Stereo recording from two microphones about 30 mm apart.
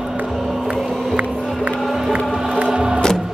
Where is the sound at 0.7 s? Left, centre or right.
Right.